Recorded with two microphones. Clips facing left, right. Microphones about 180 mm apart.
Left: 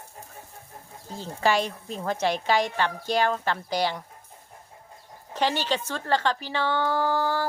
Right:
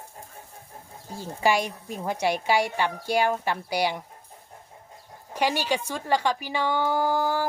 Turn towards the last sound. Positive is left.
turn(degrees=-15)  # may be behind; listen again after turning